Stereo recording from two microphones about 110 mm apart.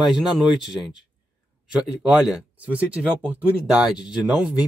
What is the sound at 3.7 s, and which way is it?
Speech, 5° right (ahead or behind).